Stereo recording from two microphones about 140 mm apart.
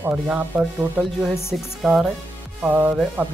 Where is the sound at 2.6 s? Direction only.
10° right (ahead or behind).